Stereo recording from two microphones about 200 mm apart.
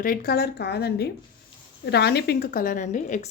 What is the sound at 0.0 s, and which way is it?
A woman's voice, 45° left (ahead or behind).